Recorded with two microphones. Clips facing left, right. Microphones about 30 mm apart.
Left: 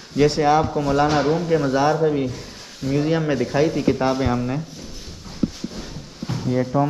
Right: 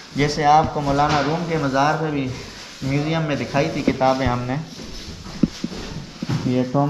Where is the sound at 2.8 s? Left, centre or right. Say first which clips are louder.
Left 1 dB; right.